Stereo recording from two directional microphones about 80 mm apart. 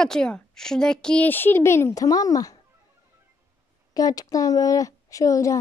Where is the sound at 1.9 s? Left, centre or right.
Left.